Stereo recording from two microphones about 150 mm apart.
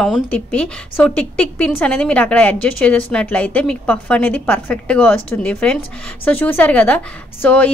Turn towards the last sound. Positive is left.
turn(degrees=10)  # may be behind; listen again after turning